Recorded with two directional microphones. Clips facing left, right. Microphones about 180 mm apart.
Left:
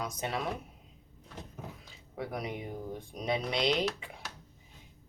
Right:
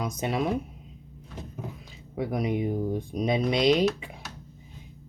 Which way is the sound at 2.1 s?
15° right (ahead or behind).